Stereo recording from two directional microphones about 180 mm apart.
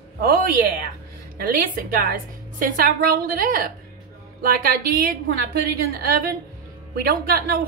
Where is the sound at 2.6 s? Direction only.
50° right (ahead or behind).